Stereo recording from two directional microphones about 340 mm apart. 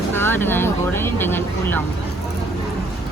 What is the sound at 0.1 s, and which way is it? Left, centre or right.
Speech, centre.